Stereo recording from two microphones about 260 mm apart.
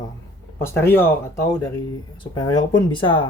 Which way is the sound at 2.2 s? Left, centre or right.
Centre.